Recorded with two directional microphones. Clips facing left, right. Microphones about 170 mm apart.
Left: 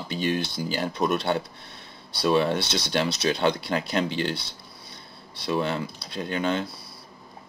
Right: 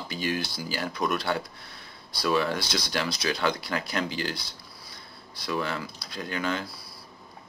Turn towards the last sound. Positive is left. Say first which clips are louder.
# left 4 dB
turn(degrees=25)  # may be behind; listen again after turning